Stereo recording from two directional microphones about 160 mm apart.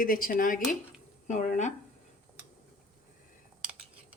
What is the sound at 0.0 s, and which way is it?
Speech, 60° left (ahead or behind).